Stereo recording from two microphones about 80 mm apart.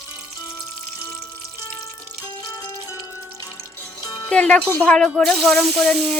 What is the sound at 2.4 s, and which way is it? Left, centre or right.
Music, left.